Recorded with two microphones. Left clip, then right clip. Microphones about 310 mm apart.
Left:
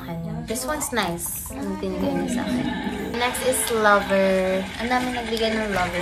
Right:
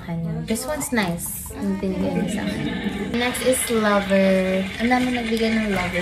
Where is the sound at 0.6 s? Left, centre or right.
Centre.